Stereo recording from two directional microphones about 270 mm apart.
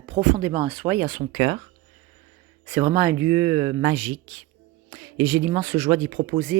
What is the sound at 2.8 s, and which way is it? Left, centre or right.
Speech, centre.